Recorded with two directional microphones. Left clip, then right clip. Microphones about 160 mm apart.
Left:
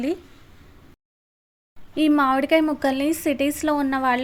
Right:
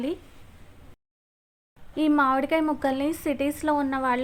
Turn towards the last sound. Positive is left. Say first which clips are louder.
# left 3 dB
turn(degrees=20)  # may be behind; listen again after turning